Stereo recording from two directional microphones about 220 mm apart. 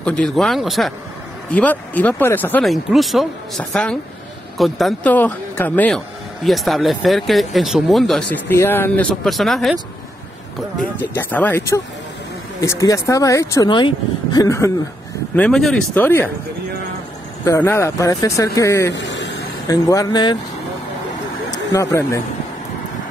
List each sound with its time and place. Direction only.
0.0 s speech: 5° left (ahead or behind)
11.0 s speech: 10° left (ahead or behind)
15.3 s speech: 5° left (ahead or behind)
17.5 s speech: 10° left (ahead or behind)
18.9 s a sound: 55° left (ahead or behind)
19.7 s speech: 15° left (ahead or behind)
21.5 s speech: 15° left (ahead or behind)